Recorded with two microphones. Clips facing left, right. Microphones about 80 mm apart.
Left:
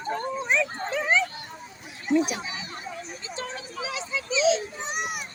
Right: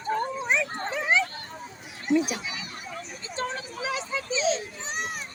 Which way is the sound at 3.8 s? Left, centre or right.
Right.